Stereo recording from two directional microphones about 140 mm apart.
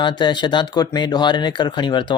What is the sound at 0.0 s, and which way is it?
Speech, 35° left (ahead or behind).